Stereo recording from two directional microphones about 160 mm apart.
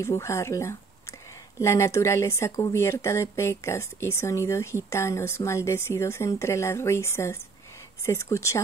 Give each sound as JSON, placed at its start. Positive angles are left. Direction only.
{"t": 0.0, "sound": "speech", "side_deg": 15}